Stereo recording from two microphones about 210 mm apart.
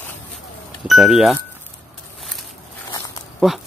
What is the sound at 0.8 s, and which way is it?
Speech, centre (ahead or behind).